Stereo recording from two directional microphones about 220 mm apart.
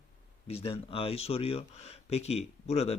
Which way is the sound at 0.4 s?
25° left (ahead or behind).